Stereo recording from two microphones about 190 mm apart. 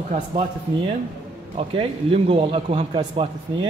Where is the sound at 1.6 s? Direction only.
30° right (ahead or behind).